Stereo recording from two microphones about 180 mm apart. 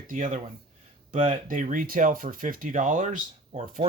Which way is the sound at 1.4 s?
45° right (ahead or behind).